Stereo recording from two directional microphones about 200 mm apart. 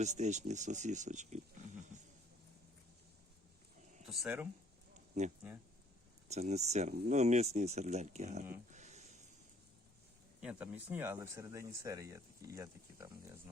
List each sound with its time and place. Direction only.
0.0 s speech: 35° right (ahead or behind)
4.0 s speech: centre (ahead or behind)
6.2 s speech: 35° right (ahead or behind)
8.7 s a sound: 35° right (ahead or behind)
10.4 s speech: 5° right (ahead or behind)